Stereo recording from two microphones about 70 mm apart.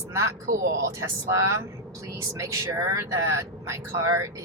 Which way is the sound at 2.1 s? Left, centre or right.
Right.